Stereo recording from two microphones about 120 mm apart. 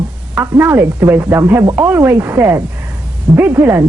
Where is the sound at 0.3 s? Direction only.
20° right (ahead or behind).